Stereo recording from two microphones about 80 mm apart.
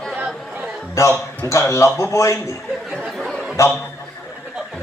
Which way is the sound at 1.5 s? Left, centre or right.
Left.